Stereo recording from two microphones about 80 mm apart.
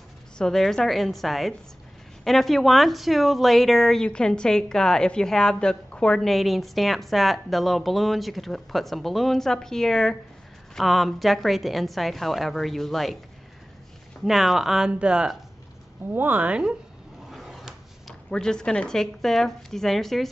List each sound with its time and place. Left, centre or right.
0.4 s a woman's voice: centre
14.2 s speech: centre
16.1 s speech: right
17.3 s drawer open or close: centre
18.3 s a woman's voice: centre